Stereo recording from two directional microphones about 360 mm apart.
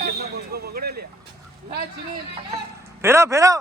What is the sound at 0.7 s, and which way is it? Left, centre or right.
Vehicle, right.